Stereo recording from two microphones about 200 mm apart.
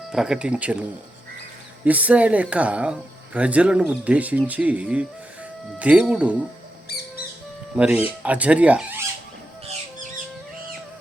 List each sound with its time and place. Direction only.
0.1 s speech: 5° right (ahead or behind)
6.9 s music: 55° left (ahead or behind)
7.8 s speech: 5° right (ahead or behind)